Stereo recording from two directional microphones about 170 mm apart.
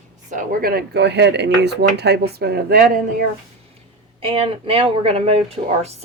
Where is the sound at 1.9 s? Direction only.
75° right (ahead or behind).